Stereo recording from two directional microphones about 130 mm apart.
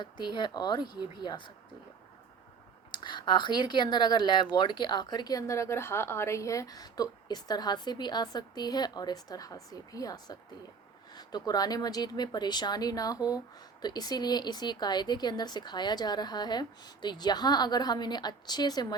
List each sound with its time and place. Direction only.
0.0 s a woman's voice: 35° left (ahead or behind)
2.9 s a woman's voice: 35° left (ahead or behind)